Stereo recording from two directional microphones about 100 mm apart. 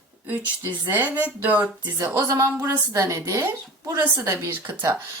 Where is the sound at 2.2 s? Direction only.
35° right (ahead or behind).